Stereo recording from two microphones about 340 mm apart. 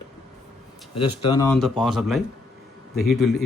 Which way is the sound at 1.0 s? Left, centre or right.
Centre.